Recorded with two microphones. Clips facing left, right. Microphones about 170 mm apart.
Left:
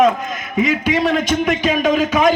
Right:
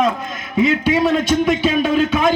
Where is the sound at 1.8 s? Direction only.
15° left (ahead or behind).